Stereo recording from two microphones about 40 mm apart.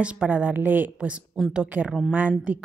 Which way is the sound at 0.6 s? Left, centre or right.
Right.